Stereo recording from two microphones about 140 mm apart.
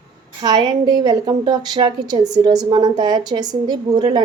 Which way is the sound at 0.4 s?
30° right (ahead or behind).